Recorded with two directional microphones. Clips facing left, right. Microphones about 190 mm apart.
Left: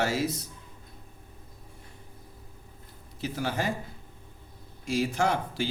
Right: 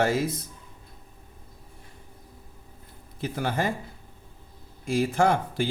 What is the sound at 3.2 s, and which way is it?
Speech, 55° right (ahead or behind).